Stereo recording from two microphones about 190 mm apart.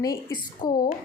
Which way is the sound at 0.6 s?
45° left (ahead or behind).